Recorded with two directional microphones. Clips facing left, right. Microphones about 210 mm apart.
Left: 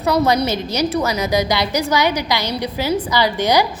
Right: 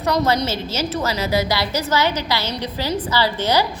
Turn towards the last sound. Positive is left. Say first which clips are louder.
# left 3 dB
turn(degrees=15)  # may be behind; listen again after turning